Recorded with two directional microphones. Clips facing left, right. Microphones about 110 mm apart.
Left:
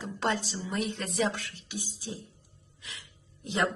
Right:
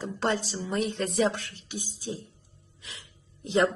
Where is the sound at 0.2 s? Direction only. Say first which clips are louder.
Right 2 dB; 40° right (ahead or behind).